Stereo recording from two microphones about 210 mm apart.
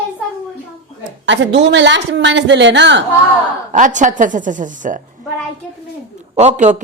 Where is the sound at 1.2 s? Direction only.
60° right (ahead or behind).